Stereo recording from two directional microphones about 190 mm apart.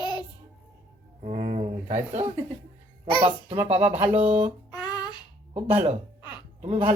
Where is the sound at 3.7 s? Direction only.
35° right (ahead or behind).